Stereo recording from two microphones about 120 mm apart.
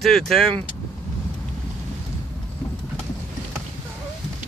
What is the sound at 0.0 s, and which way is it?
Speech, 5° left (ahead or behind).